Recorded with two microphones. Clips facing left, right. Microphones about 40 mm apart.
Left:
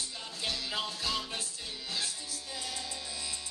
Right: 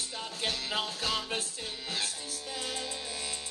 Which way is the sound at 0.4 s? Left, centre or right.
Right.